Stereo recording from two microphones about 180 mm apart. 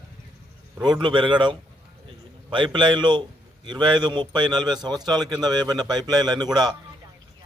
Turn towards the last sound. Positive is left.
turn(degrees=-25)  # may be behind; listen again after turning